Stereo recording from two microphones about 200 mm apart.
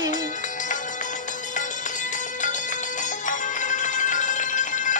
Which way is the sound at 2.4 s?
40° left (ahead or behind).